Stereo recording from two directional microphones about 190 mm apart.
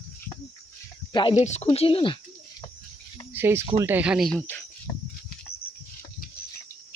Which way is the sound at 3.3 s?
10° right (ahead or behind).